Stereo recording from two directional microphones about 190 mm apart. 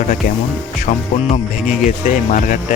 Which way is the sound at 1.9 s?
40° left (ahead or behind).